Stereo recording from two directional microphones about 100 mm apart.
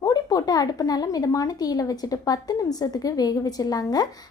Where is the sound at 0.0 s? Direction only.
35° left (ahead or behind).